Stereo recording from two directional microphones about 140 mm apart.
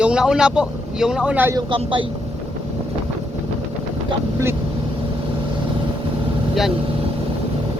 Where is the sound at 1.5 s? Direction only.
35° right (ahead or behind).